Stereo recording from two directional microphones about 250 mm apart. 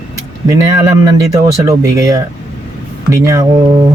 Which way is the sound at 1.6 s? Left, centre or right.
Centre.